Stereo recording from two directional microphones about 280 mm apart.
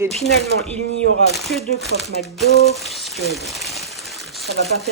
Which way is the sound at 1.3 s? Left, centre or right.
Centre.